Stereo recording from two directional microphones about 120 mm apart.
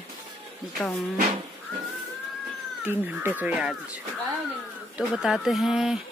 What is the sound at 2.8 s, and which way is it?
A woman's voice, 20° right (ahead or behind).